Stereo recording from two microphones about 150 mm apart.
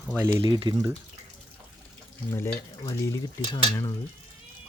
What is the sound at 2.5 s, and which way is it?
Frying, 20° left (ahead or behind).